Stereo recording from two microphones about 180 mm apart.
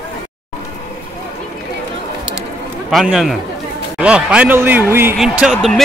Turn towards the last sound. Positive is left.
turn(degrees=0)  # may be behind; listen again after turning